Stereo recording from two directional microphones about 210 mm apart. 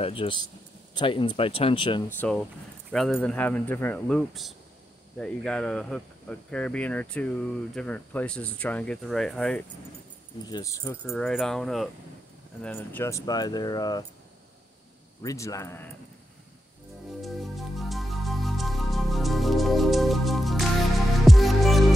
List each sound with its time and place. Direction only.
0.0 s speech: 25° left (ahead or behind)
2.0 s speech: 5° left (ahead or behind)
10.4 s speech: 15° left (ahead or behind)
11.1 s speech: centre (ahead or behind); by 14.0 s 20° left (ahead or behind)
15.2 s speech: 15° left (ahead or behind)
17.2 s music: centre (ahead or behind)